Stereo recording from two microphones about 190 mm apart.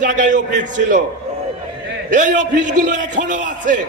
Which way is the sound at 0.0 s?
40° right (ahead or behind).